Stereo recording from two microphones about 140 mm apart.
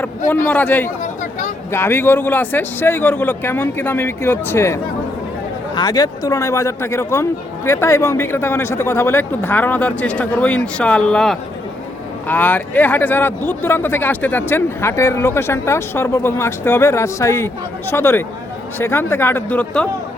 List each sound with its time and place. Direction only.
0.3 s speech: 10° left (ahead or behind)
1.2 s a sound: 65° left (ahead or behind)
1.7 s speech: 15° left (ahead or behind)
5.7 s speech: 30° left (ahead or behind); by 19.9 s 10° left (ahead or behind)